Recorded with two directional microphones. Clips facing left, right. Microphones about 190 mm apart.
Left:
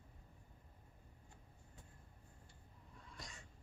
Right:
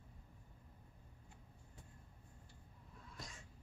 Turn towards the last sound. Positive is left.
turn(degrees=0)  # may be behind; listen again after turning